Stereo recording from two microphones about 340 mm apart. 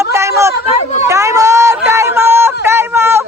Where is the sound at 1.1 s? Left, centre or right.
Centre.